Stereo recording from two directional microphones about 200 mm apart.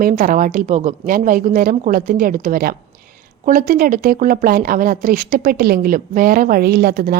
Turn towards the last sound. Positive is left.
turn(degrees=-50)  # may be behind; listen again after turning